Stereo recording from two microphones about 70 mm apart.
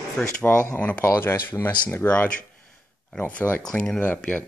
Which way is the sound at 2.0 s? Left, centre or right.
Left.